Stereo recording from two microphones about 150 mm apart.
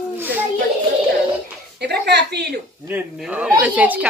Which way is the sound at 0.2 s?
10° right (ahead or behind).